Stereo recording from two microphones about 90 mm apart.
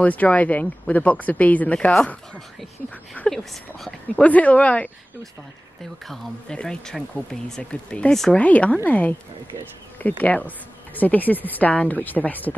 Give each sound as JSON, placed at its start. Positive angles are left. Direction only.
{"t": 0.0, "sound": "speech", "side_deg": 15}
{"t": 4.2, "sound": "speech", "side_deg": 15}
{"t": 6.0, "sound": "speech", "side_deg": 10}